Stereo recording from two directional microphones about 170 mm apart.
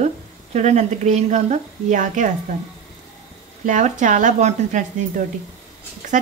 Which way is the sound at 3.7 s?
45° right (ahead or behind).